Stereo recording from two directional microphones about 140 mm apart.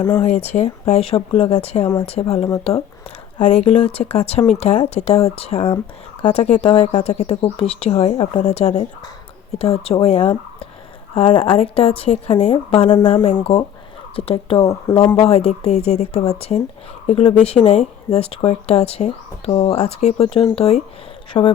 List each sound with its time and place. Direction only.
0.0 s speech: 15° left (ahead or behind)
0.3 s speech: 50° left (ahead or behind)
2.2 s speech: 35° left (ahead or behind)
3.4 s speech: 50° left (ahead or behind)
6.6 s speech: 30° left (ahead or behind)
6.8 s speech: 50° left (ahead or behind)
14.6 s speech: 25° left (ahead or behind)
15.1 s speech: 45° left (ahead or behind)
21.3 s speech: 30° left (ahead or behind)